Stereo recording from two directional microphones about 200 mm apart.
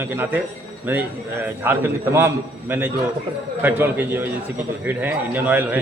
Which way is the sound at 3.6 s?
10° right (ahead or behind).